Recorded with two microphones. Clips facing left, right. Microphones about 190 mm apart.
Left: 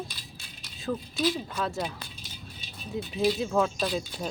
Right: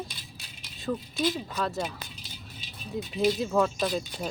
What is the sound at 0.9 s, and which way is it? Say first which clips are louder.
Speech: even; 5° left (ahead or behind).